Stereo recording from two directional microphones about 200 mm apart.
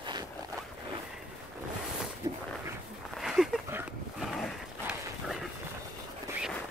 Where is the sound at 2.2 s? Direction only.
20° right (ahead or behind).